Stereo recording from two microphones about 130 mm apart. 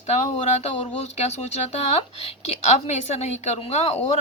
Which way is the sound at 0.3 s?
60° left (ahead or behind).